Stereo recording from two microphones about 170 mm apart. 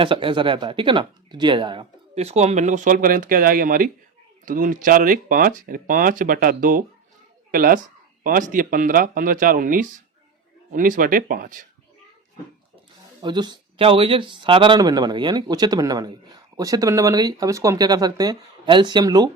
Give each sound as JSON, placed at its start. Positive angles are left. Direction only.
{"t": 0.0, "sound": "speech", "side_deg": -30}
{"t": 13.2, "sound": "speech", "side_deg": -25}